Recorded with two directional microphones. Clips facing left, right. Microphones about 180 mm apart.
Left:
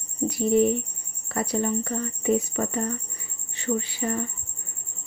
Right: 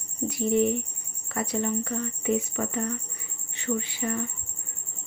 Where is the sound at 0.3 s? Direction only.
35° left (ahead or behind).